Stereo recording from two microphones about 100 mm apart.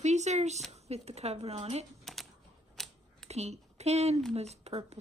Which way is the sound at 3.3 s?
90° right.